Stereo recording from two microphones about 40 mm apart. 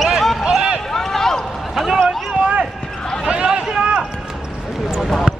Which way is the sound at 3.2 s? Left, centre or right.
Right.